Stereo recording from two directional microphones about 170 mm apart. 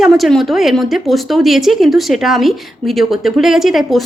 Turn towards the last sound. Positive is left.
turn(degrees=0)  # may be behind; listen again after turning